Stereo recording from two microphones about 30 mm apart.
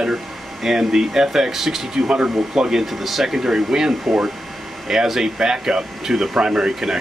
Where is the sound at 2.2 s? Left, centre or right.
Centre.